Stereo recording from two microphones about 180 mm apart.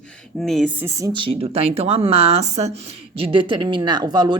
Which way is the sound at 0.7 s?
15° right (ahead or behind).